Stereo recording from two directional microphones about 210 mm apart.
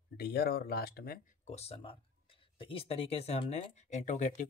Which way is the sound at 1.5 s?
30° left (ahead or behind).